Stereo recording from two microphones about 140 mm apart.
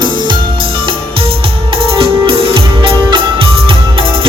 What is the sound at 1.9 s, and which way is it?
Music, 40° right (ahead or behind).